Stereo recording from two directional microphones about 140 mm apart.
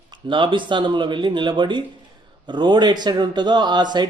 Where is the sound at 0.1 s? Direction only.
35° right (ahead or behind).